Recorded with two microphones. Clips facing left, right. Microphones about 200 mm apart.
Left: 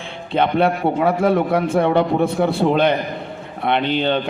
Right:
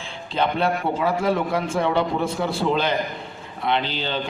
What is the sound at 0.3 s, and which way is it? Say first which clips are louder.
A man's voice: left 5 dB; 60° left (ahead or behind).